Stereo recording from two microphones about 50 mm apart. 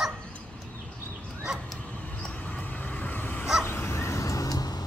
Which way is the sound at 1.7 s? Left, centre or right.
Left.